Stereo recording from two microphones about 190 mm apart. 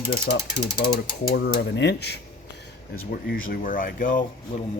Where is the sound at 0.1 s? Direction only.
55° left (ahead or behind).